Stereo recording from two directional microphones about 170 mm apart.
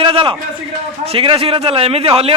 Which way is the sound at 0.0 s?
30° right (ahead or behind).